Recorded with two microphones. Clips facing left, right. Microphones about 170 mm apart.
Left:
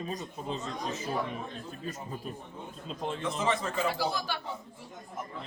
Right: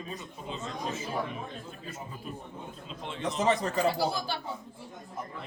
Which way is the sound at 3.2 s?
40° right (ahead or behind).